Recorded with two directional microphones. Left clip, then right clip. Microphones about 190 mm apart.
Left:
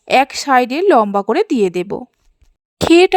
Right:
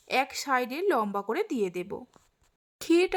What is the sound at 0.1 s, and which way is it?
Speech, 40° left (ahead or behind).